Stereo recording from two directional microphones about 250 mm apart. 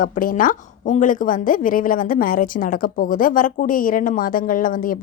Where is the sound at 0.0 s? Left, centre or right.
Left.